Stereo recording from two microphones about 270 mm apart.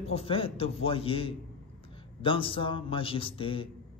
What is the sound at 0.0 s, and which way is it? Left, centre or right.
A man's voice, left.